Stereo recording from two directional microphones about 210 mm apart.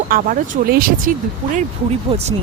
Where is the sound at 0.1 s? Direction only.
40° right (ahead or behind).